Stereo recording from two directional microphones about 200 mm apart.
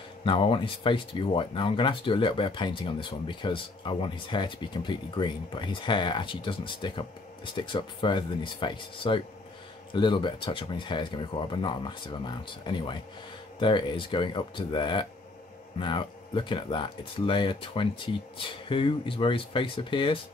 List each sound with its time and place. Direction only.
0.2 s speech: 25° left (ahead or behind)